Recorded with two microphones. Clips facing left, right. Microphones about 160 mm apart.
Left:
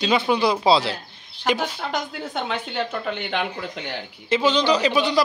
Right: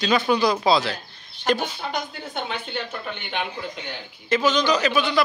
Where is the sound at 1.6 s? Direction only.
90° left.